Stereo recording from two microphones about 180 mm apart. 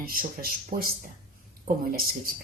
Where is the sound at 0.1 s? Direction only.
55° right (ahead or behind).